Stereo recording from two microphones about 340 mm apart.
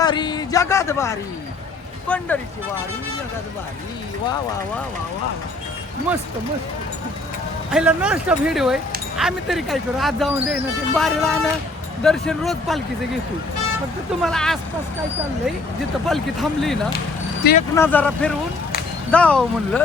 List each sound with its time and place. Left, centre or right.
0.0 s speech: centre
7.7 s speech: centre
14.2 s speech: centre
16.0 s speech: centre
17.4 s speech: left
17.7 s speech: centre